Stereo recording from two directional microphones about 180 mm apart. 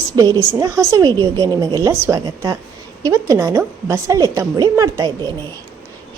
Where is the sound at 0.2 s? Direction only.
15° right (ahead or behind).